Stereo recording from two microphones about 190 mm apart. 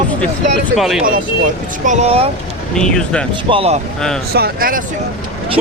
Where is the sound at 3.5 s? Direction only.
30° right (ahead or behind).